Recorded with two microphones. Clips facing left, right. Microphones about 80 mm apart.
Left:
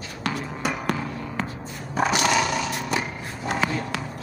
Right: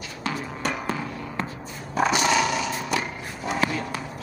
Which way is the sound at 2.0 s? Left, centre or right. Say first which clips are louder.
Even; centre.